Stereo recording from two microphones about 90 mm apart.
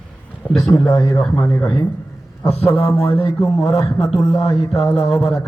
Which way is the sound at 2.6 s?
30° left (ahead or behind).